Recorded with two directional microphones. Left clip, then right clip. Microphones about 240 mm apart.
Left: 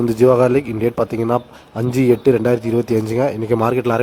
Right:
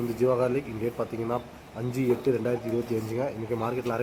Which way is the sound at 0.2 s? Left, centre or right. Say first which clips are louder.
Left 12 dB; left.